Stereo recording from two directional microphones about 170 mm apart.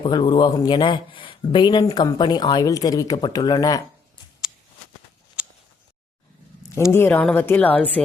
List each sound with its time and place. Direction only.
0.0 s speech: 25° left (ahead or behind)
6.9 s speech: 10° left (ahead or behind)